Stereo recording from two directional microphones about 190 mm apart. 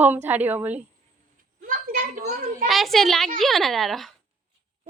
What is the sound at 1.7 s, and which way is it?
Speech, 45° right (ahead or behind).